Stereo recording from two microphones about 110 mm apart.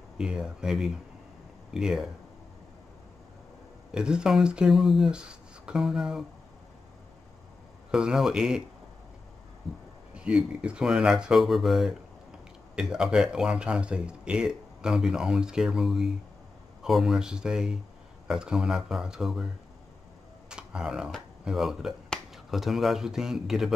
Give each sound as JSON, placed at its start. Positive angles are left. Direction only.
{"t": 0.2, "sound": "speech", "side_deg": -5}
{"t": 3.9, "sound": "speech", "side_deg": -5}
{"t": 7.9, "sound": "speech", "side_deg": -5}
{"t": 9.6, "sound": "speech", "side_deg": 0}
{"t": 20.4, "sound": "camera", "side_deg": -5}
{"t": 21.5, "sound": "speech", "side_deg": -5}